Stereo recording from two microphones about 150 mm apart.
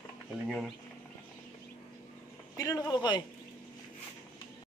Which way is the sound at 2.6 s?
25° left (ahead or behind).